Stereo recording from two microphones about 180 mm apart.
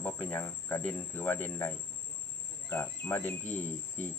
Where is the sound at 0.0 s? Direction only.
10° left (ahead or behind).